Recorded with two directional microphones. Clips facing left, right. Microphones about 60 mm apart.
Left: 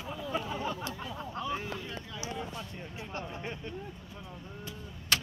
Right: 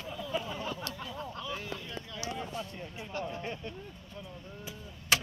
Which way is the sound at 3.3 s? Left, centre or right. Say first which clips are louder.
Right 1 dB; centre.